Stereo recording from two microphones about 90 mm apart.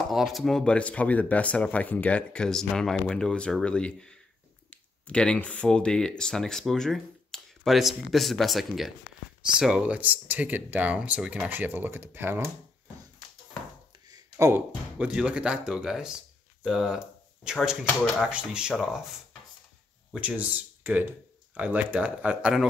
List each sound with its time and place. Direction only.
0.1 s speech: centre (ahead or behind); by 12.4 s 25° right (ahead or behind)
14.0 s a sound: 45° right (ahead or behind)
15.0 s speech: 10° right (ahead or behind)
20.2 s speech: 15° right (ahead or behind)